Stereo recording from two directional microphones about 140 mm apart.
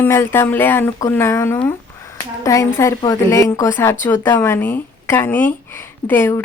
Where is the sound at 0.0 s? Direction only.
15° left (ahead or behind).